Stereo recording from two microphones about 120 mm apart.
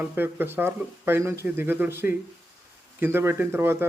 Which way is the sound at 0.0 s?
15° right (ahead or behind).